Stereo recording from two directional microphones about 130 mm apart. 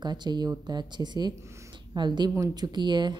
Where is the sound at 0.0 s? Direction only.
35° right (ahead or behind).